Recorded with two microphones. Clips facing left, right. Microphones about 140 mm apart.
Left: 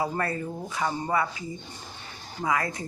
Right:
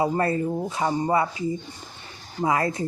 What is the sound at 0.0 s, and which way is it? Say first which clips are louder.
Speech: right 6 dB; 25° right (ahead or behind).